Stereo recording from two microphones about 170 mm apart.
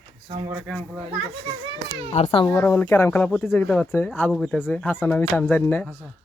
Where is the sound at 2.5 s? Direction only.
15° left (ahead or behind).